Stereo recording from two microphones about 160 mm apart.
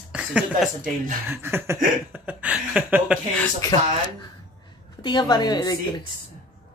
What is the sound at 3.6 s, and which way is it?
Speech, 20° left (ahead or behind).